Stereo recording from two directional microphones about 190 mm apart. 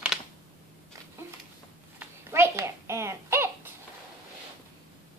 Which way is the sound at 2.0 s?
15° right (ahead or behind).